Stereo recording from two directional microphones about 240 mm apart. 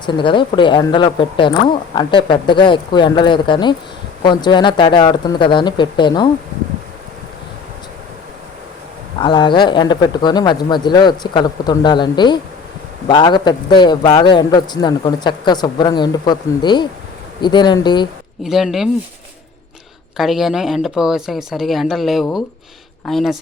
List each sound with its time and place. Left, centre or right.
0.0 s speech: centre
9.2 s a man's voice: centre
18.4 s speech: centre
20.1 s speech: centre